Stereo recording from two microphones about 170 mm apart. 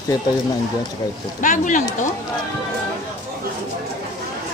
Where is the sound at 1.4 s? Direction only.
50° left (ahead or behind).